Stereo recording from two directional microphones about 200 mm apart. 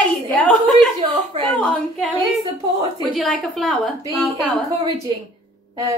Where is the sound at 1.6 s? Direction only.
Centre (ahead or behind).